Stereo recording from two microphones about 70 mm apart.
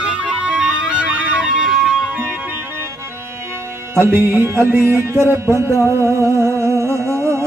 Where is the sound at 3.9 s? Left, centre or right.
Right.